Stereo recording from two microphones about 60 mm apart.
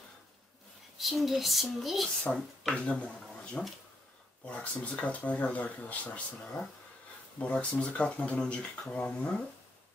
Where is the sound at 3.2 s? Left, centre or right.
Centre.